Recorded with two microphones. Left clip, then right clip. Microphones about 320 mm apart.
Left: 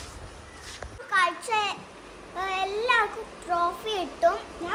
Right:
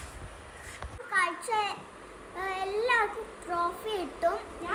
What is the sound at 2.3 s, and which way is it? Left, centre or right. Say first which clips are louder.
Child singing: left 4 dB; centre.